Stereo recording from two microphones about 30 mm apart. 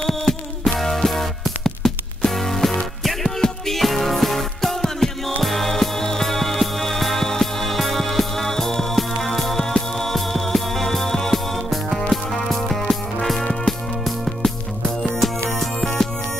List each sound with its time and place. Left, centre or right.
0.0 s music: centre
13.4 s music: centre
14.0 s music: centre
15.6 s music: centre